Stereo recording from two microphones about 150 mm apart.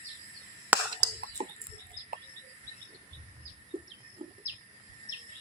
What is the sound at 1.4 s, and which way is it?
Bird, 45° right (ahead or behind).